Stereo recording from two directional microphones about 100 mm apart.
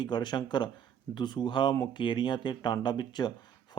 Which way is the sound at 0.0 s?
50° left (ahead or behind).